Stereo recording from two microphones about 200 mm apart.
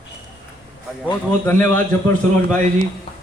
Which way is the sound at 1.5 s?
10° left (ahead or behind).